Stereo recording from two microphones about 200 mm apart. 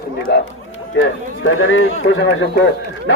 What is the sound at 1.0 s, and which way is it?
A man's voice, 80° left.